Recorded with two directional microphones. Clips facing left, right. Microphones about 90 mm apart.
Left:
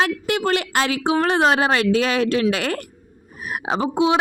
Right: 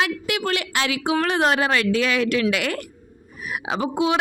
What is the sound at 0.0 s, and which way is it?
A woman's voice, 35° left (ahead or behind).